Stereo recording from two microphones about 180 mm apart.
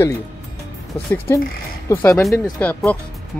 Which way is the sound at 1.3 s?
15° left (ahead or behind).